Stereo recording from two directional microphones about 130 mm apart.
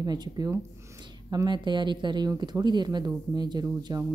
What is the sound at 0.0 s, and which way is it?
Speech, 30° right (ahead or behind).